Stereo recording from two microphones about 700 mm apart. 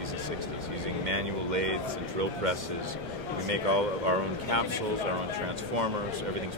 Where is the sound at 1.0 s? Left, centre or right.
Right.